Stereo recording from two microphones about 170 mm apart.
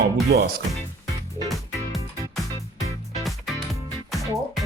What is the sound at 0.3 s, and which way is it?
Speech, 65° right (ahead or behind).